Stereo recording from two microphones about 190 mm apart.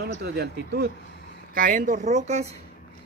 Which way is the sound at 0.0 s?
55° right (ahead or behind).